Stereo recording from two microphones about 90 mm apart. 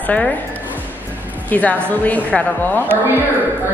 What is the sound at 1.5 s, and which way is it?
A woman's voice, 20° left (ahead or behind).